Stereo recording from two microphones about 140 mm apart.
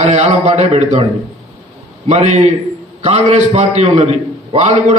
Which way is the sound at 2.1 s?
55° right (ahead or behind).